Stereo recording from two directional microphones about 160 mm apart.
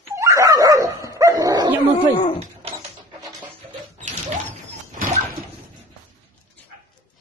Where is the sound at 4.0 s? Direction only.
50° right (ahead or behind).